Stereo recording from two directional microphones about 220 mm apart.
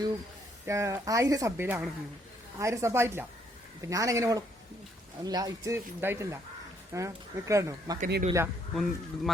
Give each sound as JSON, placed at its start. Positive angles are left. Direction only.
{"t": 0.6, "sound": "speech", "side_deg": -15}
{"t": 8.0, "sound": "speech", "side_deg": -40}
{"t": 8.7, "sound": "speech", "side_deg": 0}